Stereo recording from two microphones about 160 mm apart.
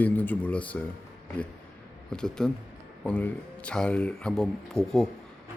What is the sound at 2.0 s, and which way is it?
A man's voice, 5° left (ahead or behind).